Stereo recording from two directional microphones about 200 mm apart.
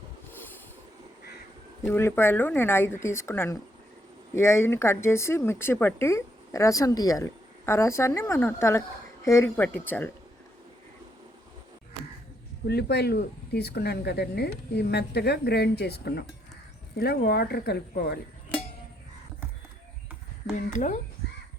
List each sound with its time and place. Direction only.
1.8 s speech: 10° left (ahead or behind)
12.6 s speech: 55° left (ahead or behind)
20.7 s speech: 40° left (ahead or behind)